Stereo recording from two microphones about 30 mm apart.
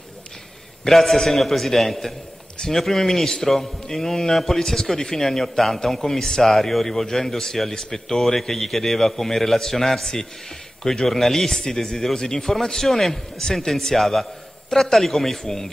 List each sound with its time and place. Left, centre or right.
0.8 s a man's voice: centre
6.5 s a man's voice: centre
13.9 s a man's voice: centre
15.4 s a man's voice: centre